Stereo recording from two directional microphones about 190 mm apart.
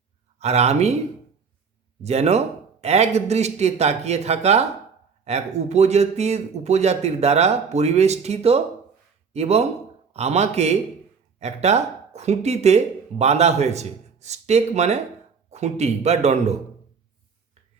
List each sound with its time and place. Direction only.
0.3 s speech: 35° right (ahead or behind)
2.0 s speech: 35° right (ahead or behind)